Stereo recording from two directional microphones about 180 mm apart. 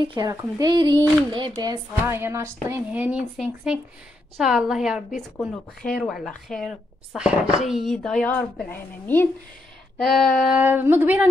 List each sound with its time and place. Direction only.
0.0 s a woman's voice: 25° right (ahead or behind)